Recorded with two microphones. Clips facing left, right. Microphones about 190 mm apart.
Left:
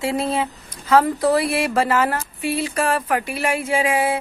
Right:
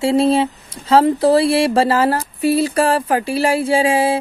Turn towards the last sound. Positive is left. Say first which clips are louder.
# right 5 dB
turn(degrees=-30)  # may be behind; listen again after turning